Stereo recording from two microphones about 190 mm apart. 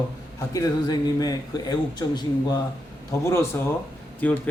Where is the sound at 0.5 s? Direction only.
20° left (ahead or behind).